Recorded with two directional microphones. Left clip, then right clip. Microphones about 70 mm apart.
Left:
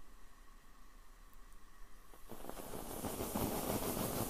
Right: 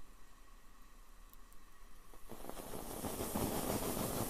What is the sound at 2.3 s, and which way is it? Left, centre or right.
Vehicle, centre.